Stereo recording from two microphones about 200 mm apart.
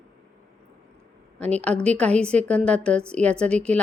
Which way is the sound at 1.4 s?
5° left (ahead or behind).